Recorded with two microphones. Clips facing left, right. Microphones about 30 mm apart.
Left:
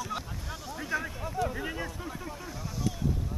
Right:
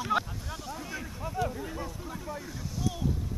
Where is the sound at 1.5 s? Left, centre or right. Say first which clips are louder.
Left 2 dB; left.